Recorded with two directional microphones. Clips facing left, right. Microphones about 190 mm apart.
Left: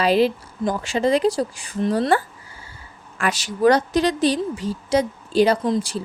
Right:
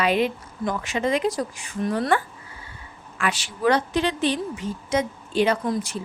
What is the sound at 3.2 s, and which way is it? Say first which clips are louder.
A woman's voice: left 5 dB; 40° left (ahead or behind).